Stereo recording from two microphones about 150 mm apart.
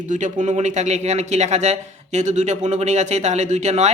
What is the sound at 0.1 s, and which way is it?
A man's voice, 55° right (ahead or behind).